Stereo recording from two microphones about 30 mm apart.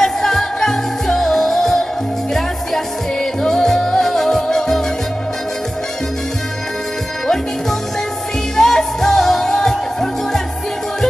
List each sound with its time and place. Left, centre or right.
0.0 s music: centre
3.2 s music: centre
8.5 s music: centre